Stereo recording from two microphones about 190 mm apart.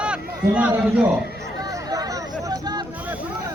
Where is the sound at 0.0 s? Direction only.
5° right (ahead or behind).